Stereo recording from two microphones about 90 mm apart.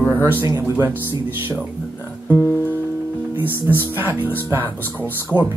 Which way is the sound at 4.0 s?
20° right (ahead or behind).